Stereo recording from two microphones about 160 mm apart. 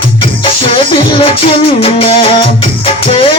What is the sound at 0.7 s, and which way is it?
Music, 35° left (ahead or behind).